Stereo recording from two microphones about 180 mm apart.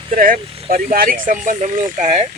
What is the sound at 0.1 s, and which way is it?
Speech, 50° right (ahead or behind).